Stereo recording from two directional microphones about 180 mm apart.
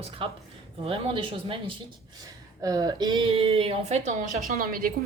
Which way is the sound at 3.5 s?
35° right (ahead or behind).